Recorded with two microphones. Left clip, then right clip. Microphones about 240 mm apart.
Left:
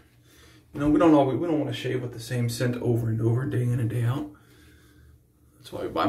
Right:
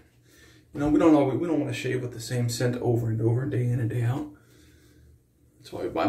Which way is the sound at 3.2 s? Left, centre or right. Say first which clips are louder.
Even; centre.